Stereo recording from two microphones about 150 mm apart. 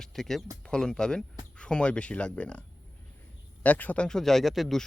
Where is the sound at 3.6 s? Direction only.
10° left (ahead or behind).